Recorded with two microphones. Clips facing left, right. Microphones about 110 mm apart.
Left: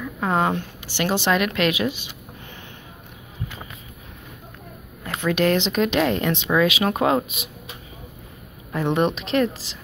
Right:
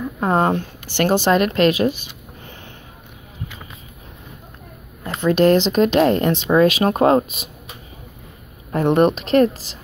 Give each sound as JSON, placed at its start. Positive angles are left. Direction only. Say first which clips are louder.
{"t": 0.0, "sound": "speech", "louder": "right 4 dB", "side_deg": -35}
{"t": 0.8, "sound": "speech", "louder": "right 5 dB", "side_deg": -50}
{"t": 5.2, "sound": "speech", "louder": "right 6 dB", "side_deg": -35}
{"t": 8.7, "sound": "a woman's voice", "louder": "right 6 dB", "side_deg": -45}